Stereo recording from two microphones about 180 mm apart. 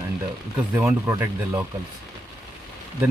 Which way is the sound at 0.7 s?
15° right (ahead or behind).